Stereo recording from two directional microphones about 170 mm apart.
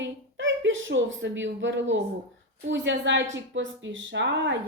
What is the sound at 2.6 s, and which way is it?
A woman's voice, 90° right.